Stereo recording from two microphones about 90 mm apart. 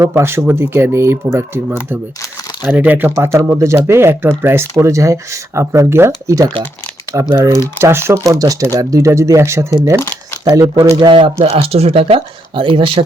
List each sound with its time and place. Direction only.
0.1 s speech: 25° right (ahead or behind)
3.2 s speech: 30° right (ahead or behind)
10.0 s speech: 25° left (ahead or behind)
11.0 s speech: 70° right (ahead or behind)
11.5 s speech: 90° right; by 13.1 s 75° right (ahead or behind)